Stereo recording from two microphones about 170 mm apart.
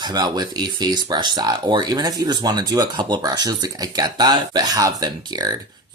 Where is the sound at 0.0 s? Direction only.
25° right (ahead or behind).